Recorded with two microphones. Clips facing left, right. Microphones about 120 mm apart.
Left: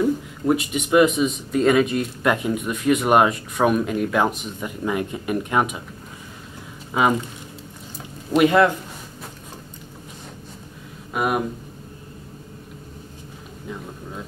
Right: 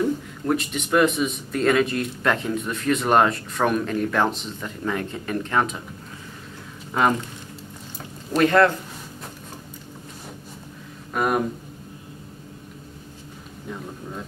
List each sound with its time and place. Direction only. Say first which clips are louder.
0.0 s a man's voice: left 3 dB; 10° left (ahead or behind)
6.9 s speech: left 1 dB; 5° left (ahead or behind)
8.4 s a man's voice: left 1 dB; 15° left (ahead or behind)
11.1 s speech: even; 5° left (ahead or behind)